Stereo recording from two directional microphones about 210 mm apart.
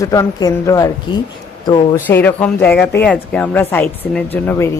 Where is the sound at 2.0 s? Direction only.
10° left (ahead or behind).